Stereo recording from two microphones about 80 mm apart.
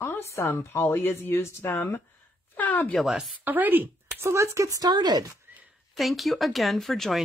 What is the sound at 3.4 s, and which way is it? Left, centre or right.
Speech, right.